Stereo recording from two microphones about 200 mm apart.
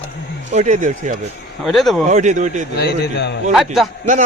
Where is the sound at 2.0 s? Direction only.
35° right (ahead or behind).